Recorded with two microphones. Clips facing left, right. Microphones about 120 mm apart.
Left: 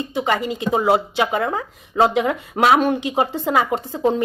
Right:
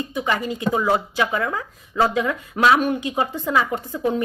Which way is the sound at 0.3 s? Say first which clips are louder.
Left 2 dB; 15° left (ahead or behind).